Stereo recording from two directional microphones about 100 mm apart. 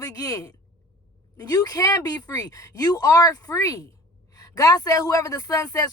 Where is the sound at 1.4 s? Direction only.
40° left (ahead or behind).